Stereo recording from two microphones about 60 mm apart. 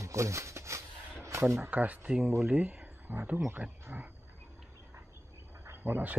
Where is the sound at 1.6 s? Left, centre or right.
Right.